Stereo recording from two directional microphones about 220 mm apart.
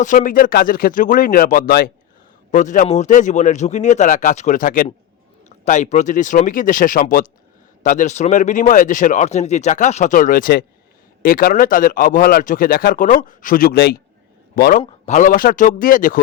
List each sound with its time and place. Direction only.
0.0 s speech: 35° left (ahead or behind)